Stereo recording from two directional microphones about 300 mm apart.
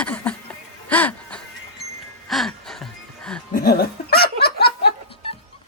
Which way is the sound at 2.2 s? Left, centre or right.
Centre.